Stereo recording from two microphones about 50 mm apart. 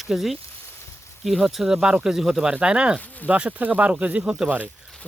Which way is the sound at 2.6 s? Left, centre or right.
Centre.